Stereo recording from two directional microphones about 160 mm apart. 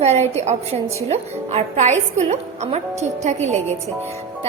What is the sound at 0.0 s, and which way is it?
A woman's voice, 40° right (ahead or behind).